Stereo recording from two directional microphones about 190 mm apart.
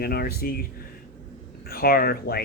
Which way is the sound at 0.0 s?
55° left (ahead or behind).